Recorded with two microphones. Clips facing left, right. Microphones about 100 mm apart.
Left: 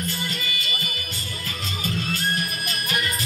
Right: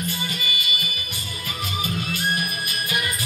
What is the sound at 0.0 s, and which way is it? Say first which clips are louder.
Music: right 1 dB; 15° right (ahead or behind).